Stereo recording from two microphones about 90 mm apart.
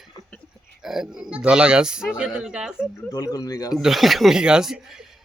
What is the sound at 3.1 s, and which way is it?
Speech, 40° left (ahead or behind).